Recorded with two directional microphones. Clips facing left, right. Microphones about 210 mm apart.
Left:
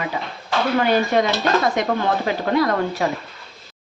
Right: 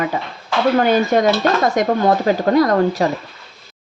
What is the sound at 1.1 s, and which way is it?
Speech, 45° right (ahead or behind).